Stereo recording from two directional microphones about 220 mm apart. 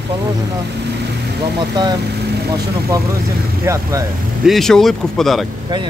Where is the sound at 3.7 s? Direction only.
10° right (ahead or behind).